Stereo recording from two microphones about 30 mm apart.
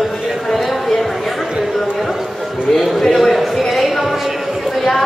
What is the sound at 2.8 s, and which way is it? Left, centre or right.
Speech, centre.